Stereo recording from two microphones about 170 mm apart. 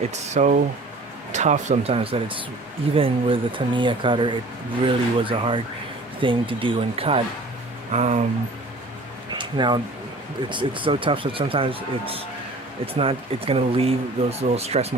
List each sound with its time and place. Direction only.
0.1 s speech: 45° right (ahead or behind)
9.3 s speech: 25° right (ahead or behind)